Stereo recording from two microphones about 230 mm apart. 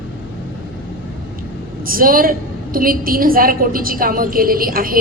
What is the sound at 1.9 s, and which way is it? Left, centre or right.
A woman's voice, right.